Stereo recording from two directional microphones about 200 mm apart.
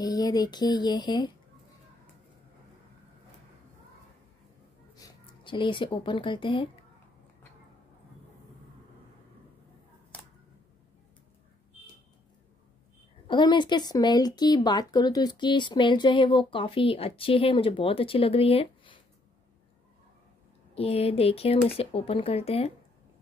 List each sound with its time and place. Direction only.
0.0 s speech: 20° left (ahead or behind)
4.9 s speech: 20° left (ahead or behind)
13.3 s speech: 25° left (ahead or behind)
20.7 s speech: 30° left (ahead or behind)